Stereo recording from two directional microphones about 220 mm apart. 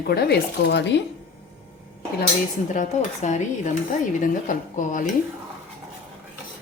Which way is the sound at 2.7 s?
35° left (ahead or behind).